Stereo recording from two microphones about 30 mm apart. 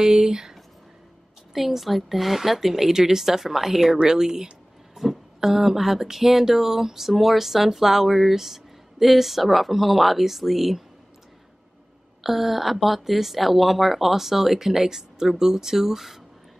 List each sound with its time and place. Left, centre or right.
0.0 s a woman's voice: centre
1.5 s a woman's voice: centre
4.1 s speech: centre
4.9 s a woman's voice: centre
12.2 s a woman's voice: centre